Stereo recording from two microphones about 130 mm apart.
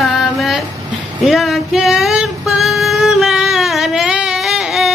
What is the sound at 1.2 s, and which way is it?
Female singing, centre (ahead or behind).